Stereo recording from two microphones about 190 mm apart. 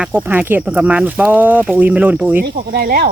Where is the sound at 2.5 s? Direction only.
55° right (ahead or behind).